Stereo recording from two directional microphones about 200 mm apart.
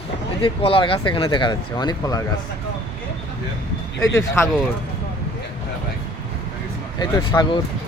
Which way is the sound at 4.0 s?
15° left (ahead or behind).